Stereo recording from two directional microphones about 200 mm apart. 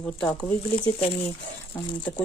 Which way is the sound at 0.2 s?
5° left (ahead or behind).